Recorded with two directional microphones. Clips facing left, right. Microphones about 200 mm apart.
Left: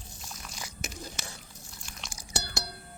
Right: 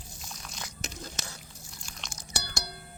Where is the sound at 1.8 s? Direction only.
10° left (ahead or behind).